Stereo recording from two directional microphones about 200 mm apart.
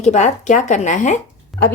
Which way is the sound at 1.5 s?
Centre (ahead or behind).